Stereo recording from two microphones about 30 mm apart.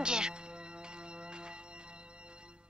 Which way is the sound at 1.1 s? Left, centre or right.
Right.